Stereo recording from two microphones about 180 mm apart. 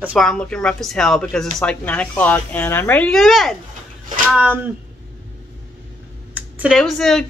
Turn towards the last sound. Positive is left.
turn(degrees=0)  # may be behind; listen again after turning